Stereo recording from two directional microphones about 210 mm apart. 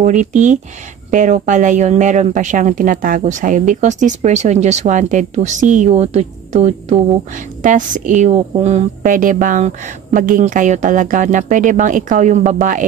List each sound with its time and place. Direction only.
0.0 s speech: 35° right (ahead or behind)